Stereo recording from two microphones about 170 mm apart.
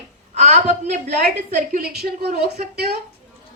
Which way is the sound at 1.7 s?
60° right (ahead or behind).